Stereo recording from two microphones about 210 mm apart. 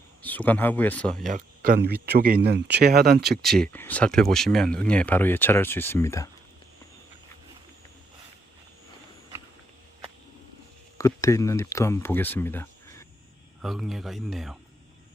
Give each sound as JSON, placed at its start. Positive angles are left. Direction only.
{"t": 0.3, "sound": "speech", "side_deg": 10}
{"t": 1.3, "sound": "speech", "side_deg": -40}
{"t": 3.4, "sound": "speech", "side_deg": 5}
{"t": 10.9, "sound": "speech", "side_deg": 15}
{"t": 13.6, "sound": "speech", "side_deg": 0}